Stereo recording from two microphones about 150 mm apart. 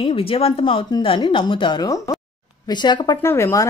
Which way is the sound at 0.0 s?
40° left (ahead or behind).